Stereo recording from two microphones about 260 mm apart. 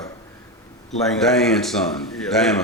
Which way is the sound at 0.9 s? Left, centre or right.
Centre.